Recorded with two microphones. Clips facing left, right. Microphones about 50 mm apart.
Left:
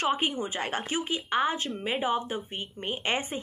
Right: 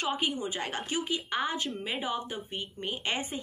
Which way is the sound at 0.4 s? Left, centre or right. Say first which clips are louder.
Left 3 dB; left.